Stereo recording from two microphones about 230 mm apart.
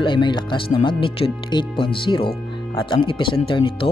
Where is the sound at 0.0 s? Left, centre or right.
Left.